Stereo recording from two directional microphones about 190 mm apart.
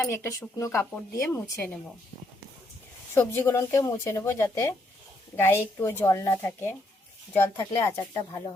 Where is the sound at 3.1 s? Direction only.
10° left (ahead or behind).